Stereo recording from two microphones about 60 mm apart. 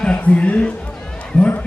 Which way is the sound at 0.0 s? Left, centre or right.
Centre.